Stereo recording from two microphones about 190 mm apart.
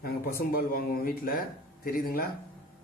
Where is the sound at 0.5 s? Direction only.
50° left (ahead or behind).